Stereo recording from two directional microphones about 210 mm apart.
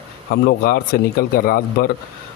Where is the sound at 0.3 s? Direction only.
50° left (ahead or behind).